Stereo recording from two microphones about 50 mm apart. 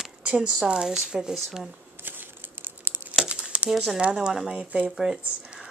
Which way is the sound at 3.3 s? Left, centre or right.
Right.